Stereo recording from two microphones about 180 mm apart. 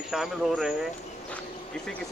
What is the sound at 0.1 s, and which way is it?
Speech, centre (ahead or behind).